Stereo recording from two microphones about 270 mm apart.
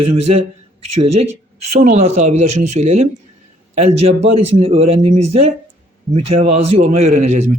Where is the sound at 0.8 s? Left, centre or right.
Right.